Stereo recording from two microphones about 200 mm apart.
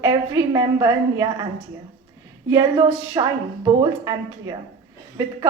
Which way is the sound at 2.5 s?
15° right (ahead or behind).